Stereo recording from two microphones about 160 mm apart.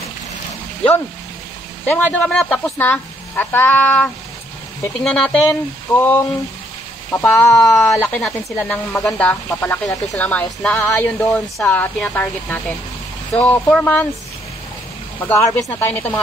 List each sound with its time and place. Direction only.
1.9 s speech: 10° left (ahead or behind)
15.1 s speech: 10° left (ahead or behind)